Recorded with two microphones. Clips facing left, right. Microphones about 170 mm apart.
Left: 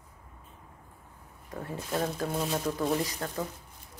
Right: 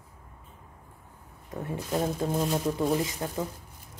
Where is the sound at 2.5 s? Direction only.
10° right (ahead or behind).